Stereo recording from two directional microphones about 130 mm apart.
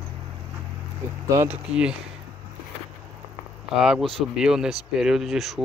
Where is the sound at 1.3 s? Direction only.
20° right (ahead or behind).